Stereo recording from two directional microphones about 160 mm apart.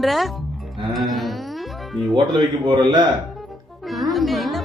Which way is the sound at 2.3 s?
30° right (ahead or behind).